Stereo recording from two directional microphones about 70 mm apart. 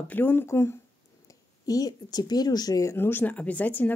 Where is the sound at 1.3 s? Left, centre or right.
Left.